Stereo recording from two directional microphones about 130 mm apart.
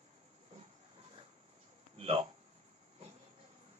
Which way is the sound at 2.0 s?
50° right (ahead or behind).